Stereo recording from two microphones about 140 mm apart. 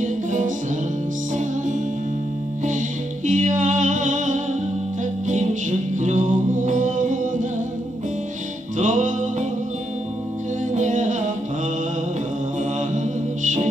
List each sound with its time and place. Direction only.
0.0 s music: 65° right (ahead or behind)
3.3 s music: 60° right (ahead or behind)
8.7 s music: 60° right (ahead or behind)
10.7 s music: 60° right (ahead or behind)
12.9 s mantra: 60° right (ahead or behind)